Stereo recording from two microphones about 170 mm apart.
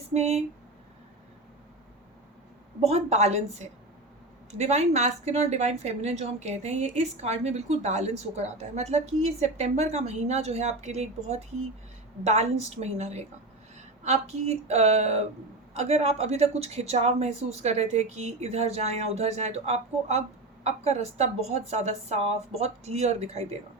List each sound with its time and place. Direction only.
0.1 s a woman's voice: 40° right (ahead or behind)
2.8 s a woman's voice: 40° right (ahead or behind)